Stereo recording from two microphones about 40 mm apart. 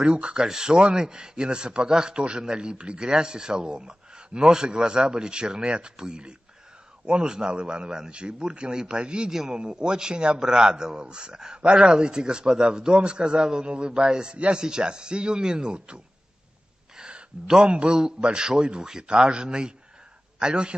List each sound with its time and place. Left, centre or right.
0.0 s a man's voice: right
9.3 s a man's voice: centre
9.6 s a man's voice: right
16.9 s a sound: centre
18.2 s a man's voice: right